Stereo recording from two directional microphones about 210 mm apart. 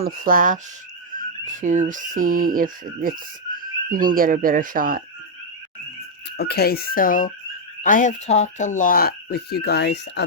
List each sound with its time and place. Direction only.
0.0 s speech: 40° right (ahead or behind)
1.6 s speech: 35° right (ahead or behind)
6.3 s speech: 50° left (ahead or behind)